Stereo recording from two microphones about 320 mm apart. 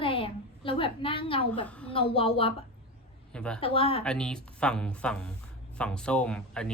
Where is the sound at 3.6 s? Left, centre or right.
Centre.